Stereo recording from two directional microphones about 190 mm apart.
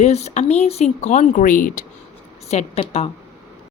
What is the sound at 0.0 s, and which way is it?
Speech, 35° left (ahead or behind).